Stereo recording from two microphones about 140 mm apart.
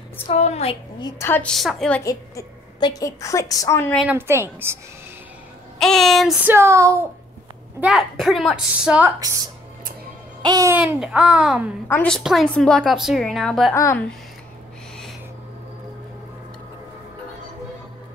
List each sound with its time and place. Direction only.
0.3 s a woman's voice: 50° left (ahead or behind)
1.2 s a woman's voice: 15° left (ahead or behind)
1.5 s a woman's voice: centre (ahead or behind)
2.0 s a woman's voice: 25° left (ahead or behind)
4.1 s a woman's voice: 15° right (ahead or behind)
5.8 s a woman's voice: centre (ahead or behind)
6.4 s a sound: 20° right (ahead or behind)
7.8 s a woman's voice: centre (ahead or behind)
10.4 s babbling: 25° right (ahead or behind)
10.8 s a child's voice: 5° right (ahead or behind)
11.9 s a woman's voice: 10° left (ahead or behind)
12.2 s a woman's voice: centre (ahead or behind)